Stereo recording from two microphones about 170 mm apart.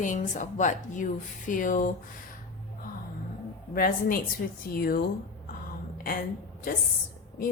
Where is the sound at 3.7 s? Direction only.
60° left (ahead or behind).